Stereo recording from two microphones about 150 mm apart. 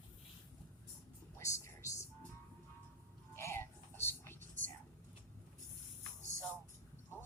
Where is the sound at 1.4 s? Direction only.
20° left (ahead or behind).